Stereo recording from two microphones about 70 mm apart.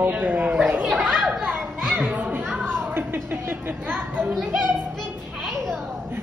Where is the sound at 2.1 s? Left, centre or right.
Right.